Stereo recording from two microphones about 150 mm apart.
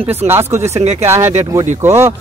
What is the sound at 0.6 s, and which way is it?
Speech, 45° right (ahead or behind).